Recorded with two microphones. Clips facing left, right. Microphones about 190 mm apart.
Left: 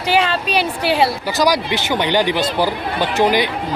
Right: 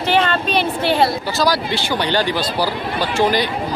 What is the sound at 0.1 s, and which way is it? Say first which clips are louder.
Speech: even; 10° left (ahead or behind).